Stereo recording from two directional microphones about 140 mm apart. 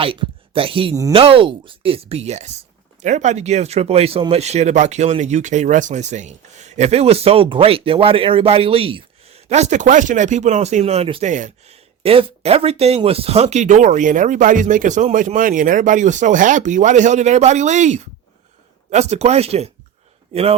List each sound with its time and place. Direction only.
0.0 s speech: 40° right (ahead or behind)
11.3 s speech: 60° right (ahead or behind); by 20.6 s 45° right (ahead or behind)